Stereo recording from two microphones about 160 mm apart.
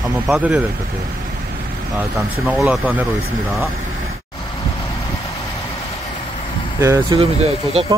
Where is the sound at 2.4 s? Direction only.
5° right (ahead or behind).